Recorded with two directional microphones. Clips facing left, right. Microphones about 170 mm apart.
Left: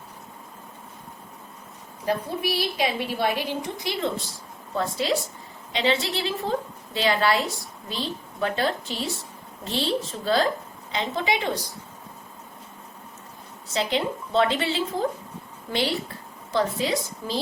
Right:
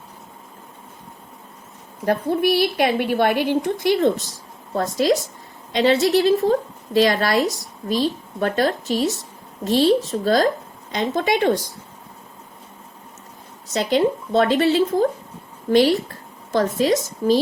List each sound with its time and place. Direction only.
2.0 s a woman's voice: 55° right (ahead or behind)
13.7 s a woman's voice: 40° right (ahead or behind)